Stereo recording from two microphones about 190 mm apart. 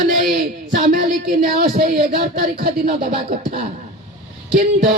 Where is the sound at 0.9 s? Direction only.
50° right (ahead or behind).